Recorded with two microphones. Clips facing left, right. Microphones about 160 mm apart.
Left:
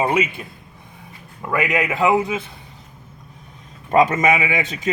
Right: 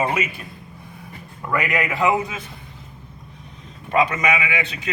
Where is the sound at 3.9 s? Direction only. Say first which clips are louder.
Left 4 dB; 45° left (ahead or behind).